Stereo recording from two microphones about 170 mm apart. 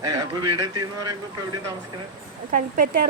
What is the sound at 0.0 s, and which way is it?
A man's voice, 25° right (ahead or behind).